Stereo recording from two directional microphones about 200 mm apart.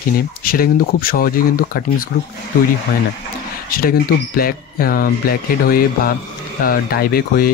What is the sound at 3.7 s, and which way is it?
Speech, 50° left (ahead or behind).